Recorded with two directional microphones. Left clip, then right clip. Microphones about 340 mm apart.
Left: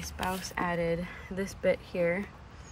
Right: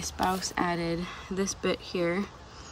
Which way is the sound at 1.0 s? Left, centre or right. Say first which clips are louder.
Right 3 dB; right.